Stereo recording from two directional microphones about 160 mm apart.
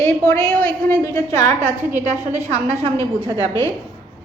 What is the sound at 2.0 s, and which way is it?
Speech, 45° right (ahead or behind).